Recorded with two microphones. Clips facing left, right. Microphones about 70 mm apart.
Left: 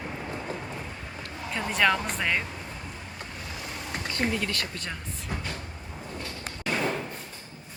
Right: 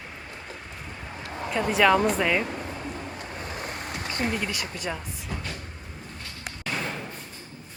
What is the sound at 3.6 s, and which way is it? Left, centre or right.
Vehicle, right.